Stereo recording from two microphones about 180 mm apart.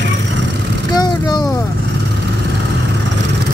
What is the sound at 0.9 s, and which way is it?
Speech, 20° left (ahead or behind).